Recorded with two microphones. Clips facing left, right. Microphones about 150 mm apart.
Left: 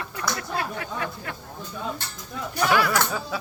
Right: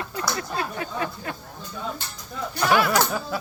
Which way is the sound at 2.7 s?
25° right (ahead or behind).